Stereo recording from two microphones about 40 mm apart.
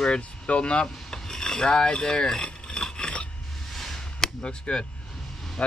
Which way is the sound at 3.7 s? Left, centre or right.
Centre.